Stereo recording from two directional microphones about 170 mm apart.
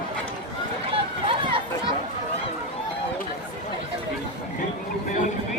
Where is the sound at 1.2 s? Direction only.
30° right (ahead or behind).